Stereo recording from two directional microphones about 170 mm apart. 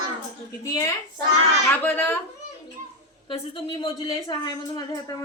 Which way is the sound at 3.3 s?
30° left (ahead or behind).